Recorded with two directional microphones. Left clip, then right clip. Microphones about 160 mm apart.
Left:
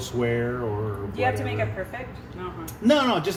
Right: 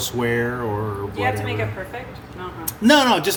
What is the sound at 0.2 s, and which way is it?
Speech, 80° right.